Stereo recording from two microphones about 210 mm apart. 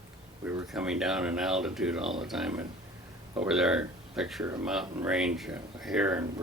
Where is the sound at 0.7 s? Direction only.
5° right (ahead or behind).